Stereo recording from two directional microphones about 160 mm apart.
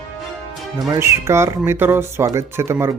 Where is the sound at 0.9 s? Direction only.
15° right (ahead or behind).